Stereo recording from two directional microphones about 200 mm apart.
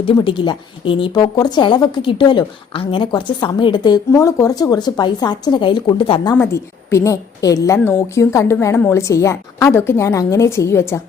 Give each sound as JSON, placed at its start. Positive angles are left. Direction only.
{"t": 0.0, "sound": "a woman's voice", "side_deg": 25}
{"t": 6.3, "sound": "a woman's voice", "side_deg": 15}